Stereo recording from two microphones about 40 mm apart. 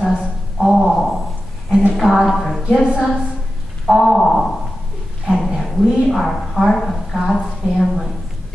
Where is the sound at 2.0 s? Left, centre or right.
Centre.